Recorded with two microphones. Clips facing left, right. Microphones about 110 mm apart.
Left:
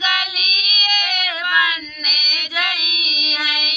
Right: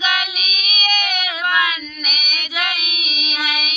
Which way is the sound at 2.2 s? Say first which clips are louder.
Even; 15° right (ahead or behind).